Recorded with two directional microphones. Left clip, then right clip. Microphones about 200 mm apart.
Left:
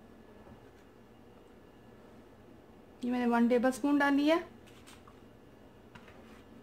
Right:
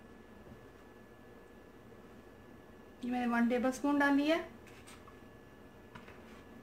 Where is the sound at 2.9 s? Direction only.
40° left (ahead or behind).